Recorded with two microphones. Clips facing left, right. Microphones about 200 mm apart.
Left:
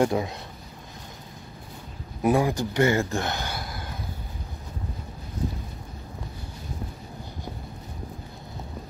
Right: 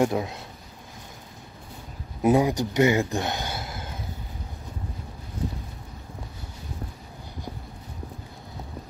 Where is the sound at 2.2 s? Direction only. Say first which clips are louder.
Right 2 dB; 20° right (ahead or behind).